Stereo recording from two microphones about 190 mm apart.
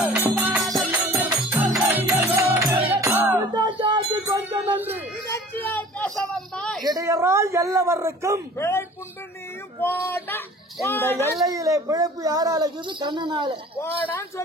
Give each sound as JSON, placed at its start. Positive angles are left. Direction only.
{"t": 0.4, "sound": "music", "side_deg": -15}
{"t": 0.7, "sound": "music", "side_deg": 0}
{"t": 4.4, "sound": "a sound", "side_deg": -10}
{"t": 5.3, "sound": "a sound", "side_deg": 10}
{"t": 6.8, "sound": "speech", "side_deg": -20}
{"t": 8.5, "sound": "speech", "side_deg": 15}
{"t": 11.4, "sound": "speech", "side_deg": -15}
{"t": 13.7, "sound": "speech", "side_deg": 10}